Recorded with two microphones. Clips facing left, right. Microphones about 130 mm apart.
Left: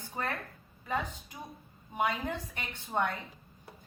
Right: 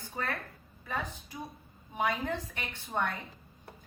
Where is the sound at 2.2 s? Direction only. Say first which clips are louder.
Right 1 dB; 20° left (ahead or behind).